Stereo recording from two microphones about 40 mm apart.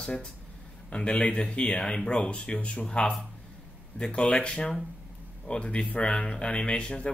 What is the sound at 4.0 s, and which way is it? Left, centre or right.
Speech, left.